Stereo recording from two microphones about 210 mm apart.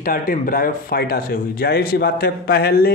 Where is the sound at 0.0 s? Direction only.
45° left (ahead or behind).